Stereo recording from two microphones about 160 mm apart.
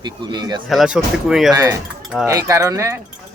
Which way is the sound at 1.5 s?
20° right (ahead or behind).